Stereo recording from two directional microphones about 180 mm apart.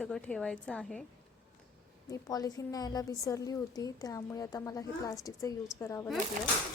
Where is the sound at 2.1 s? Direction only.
20° left (ahead or behind).